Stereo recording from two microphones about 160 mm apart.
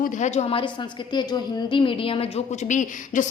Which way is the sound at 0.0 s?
50° left (ahead or behind).